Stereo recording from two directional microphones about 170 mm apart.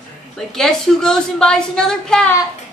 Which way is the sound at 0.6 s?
5° left (ahead or behind).